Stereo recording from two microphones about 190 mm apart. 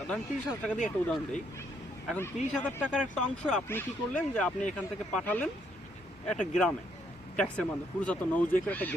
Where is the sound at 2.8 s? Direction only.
5° right (ahead or behind).